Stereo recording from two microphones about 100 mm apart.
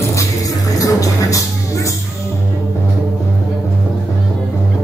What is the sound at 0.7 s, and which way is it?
Music, 35° left (ahead or behind).